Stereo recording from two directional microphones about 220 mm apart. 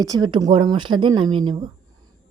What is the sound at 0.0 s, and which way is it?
Speech, 20° right (ahead or behind).